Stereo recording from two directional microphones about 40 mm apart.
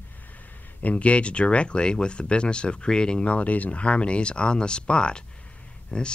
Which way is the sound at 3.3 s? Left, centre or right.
Left.